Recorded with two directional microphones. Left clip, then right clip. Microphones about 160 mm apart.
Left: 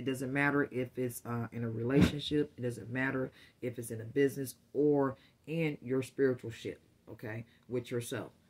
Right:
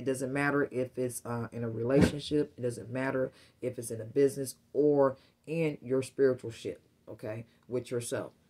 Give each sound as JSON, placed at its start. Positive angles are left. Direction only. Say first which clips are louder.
{"t": 0.0, "sound": "speech", "louder": "right 2 dB", "side_deg": 25}